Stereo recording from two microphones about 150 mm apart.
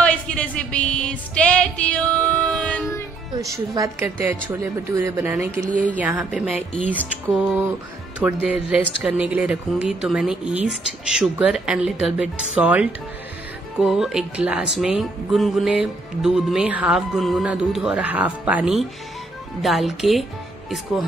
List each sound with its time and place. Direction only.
0.0 s music: 10° left (ahead or behind)
3.5 s speech: 20° right (ahead or behind)
5.6 s speech: 60° right (ahead or behind)
5.9 s speech: 10° right (ahead or behind)
8.2 s speech: 5° right (ahead or behind)